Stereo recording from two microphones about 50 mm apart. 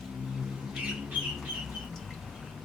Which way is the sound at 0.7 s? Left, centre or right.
Centre.